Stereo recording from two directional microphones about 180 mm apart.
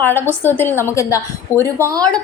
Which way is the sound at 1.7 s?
15° right (ahead or behind).